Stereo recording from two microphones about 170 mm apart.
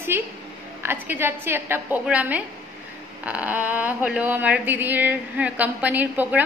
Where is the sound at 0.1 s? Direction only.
15° right (ahead or behind).